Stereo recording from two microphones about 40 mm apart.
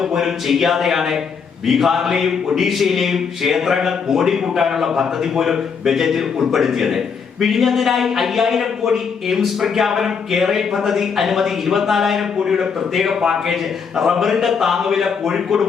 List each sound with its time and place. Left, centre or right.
0.0 s a man's voice: centre